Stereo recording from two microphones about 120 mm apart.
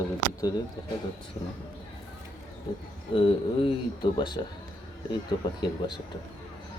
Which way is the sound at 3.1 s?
50° left (ahead or behind).